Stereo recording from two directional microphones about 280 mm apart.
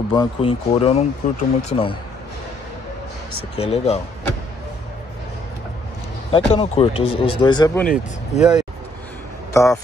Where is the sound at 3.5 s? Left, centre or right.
Left.